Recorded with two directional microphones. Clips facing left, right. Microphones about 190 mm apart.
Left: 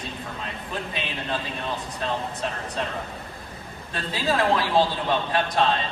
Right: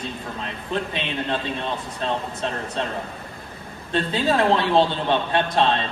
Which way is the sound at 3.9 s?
25° right (ahead or behind).